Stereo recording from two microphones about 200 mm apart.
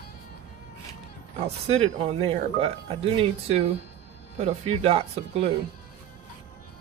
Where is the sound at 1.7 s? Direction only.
30° right (ahead or behind).